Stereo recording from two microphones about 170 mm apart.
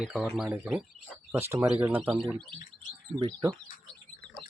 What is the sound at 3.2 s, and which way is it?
Speech, 25° right (ahead or behind).